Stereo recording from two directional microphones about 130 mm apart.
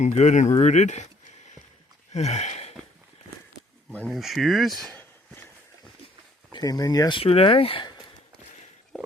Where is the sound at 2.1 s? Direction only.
60° left (ahead or behind).